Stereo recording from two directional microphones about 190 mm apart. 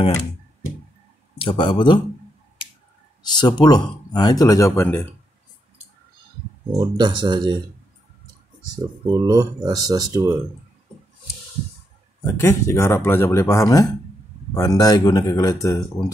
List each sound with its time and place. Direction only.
1.4 s speech: 25° left (ahead or behind)
3.2 s speech: 20° left (ahead or behind)
6.8 s speech: 25° right (ahead or behind)
9.1 s speech: 20° right (ahead or behind)
12.4 s speech: 15° left (ahead or behind)